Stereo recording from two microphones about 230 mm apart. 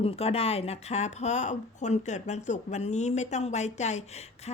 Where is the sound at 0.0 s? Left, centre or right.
Left.